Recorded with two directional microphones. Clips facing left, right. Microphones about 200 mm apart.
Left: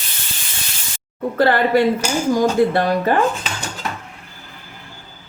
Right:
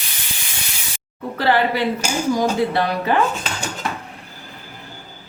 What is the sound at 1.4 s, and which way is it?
A woman's voice, 50° left (ahead or behind).